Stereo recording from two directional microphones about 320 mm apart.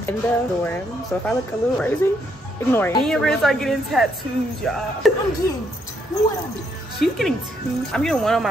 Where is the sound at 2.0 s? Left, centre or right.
Centre.